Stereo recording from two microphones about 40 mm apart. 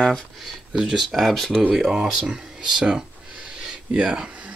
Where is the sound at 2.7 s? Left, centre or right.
Centre.